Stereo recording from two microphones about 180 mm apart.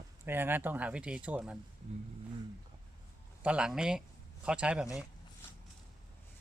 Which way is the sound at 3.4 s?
5° right (ahead or behind).